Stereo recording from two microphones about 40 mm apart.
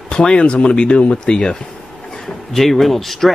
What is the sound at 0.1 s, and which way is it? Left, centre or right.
Speech, left.